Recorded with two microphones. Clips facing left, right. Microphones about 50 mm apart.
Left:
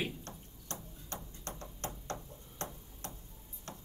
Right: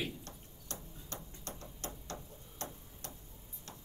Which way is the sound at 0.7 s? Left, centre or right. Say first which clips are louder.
Left 2 dB; left.